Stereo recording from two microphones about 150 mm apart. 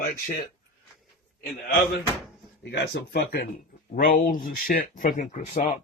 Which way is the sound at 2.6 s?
90° left.